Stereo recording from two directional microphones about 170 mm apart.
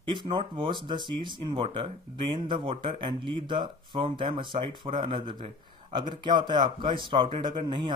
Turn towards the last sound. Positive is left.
turn(degrees=-30)  # may be behind; listen again after turning